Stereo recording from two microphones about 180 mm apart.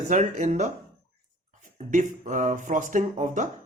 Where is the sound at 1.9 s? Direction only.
45° right (ahead or behind).